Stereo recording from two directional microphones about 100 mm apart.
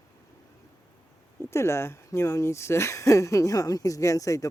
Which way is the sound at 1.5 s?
25° left (ahead or behind).